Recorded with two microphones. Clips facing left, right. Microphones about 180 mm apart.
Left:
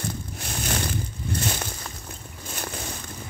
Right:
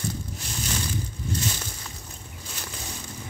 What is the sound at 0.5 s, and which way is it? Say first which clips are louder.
Crushing: left 3 dB; 55° left (ahead or behind).